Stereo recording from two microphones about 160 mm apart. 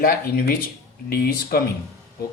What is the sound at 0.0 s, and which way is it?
Speech, 65° left (ahead or behind).